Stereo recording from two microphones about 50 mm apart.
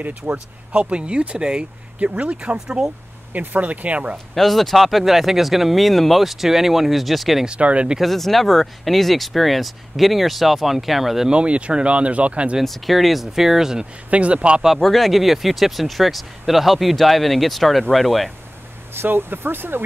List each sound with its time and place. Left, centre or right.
0.0 s speech: right
0.7 s speech: right
2.5 s speech: centre
3.3 s speech: right
4.4 s speech: centre
7.4 s speech: right
8.0 s speech: centre
11.2 s speech: right
12.6 s speech: centre
14.1 s speech: right
14.8 s speech: centre
18.9 s speech: right